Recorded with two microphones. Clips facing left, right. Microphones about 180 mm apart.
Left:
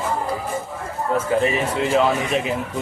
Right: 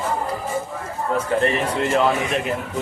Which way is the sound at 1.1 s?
5° left (ahead or behind).